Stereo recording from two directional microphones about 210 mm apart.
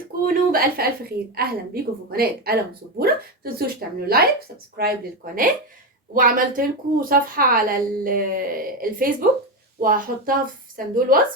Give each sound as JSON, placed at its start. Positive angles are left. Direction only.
{"t": 0.5, "sound": "a woman's voice", "side_deg": -45}